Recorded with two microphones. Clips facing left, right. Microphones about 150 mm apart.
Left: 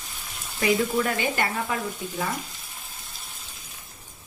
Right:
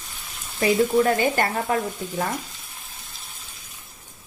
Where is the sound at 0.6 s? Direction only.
35° right (ahead or behind).